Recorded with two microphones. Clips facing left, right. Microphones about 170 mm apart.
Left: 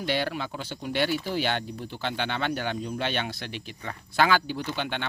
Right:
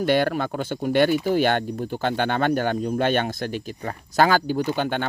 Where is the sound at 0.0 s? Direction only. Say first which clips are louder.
Right 8 dB; 50° right (ahead or behind).